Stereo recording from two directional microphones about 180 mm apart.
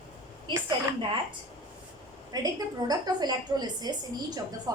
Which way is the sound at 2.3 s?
20° right (ahead or behind).